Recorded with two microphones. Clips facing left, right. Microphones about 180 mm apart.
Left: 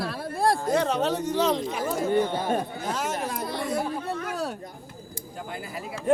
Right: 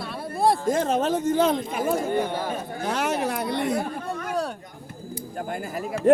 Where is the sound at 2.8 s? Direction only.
65° right (ahead or behind).